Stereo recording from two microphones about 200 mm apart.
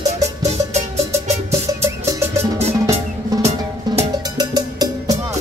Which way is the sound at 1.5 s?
15° right (ahead or behind).